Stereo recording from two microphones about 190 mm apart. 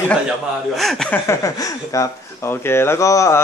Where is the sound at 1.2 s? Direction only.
15° left (ahead or behind).